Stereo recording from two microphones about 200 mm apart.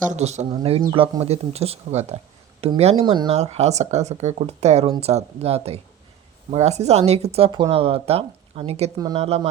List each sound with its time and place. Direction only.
0.0 s speech: 35° right (ahead or behind)